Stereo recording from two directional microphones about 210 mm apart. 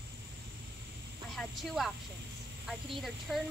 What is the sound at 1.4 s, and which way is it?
Speech, centre (ahead or behind).